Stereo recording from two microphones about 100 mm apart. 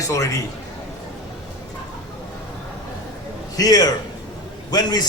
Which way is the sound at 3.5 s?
40° left (ahead or behind).